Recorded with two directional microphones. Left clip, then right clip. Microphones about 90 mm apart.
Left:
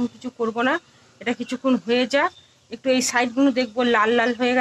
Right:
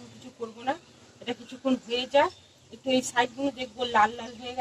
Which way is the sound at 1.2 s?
30° left (ahead or behind).